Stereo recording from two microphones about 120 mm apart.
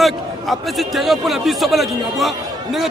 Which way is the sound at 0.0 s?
Centre (ahead or behind).